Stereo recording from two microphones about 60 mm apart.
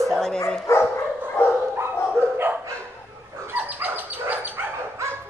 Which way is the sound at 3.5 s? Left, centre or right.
Right.